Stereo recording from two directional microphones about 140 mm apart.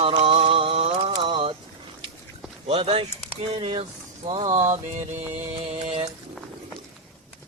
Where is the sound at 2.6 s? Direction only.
45° right (ahead or behind).